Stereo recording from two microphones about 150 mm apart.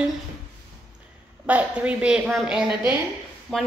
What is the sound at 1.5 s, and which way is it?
A woman's voice, 10° right (ahead or behind).